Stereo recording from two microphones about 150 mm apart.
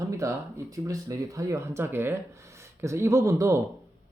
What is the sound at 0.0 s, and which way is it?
Speech, 20° right (ahead or behind).